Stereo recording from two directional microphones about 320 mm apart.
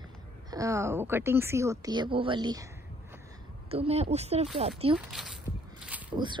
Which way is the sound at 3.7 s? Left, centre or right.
Centre.